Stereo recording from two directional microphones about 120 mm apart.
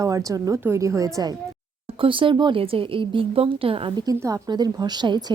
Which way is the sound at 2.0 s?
45° right (ahead or behind).